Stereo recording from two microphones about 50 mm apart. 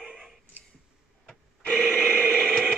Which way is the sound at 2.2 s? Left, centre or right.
Centre.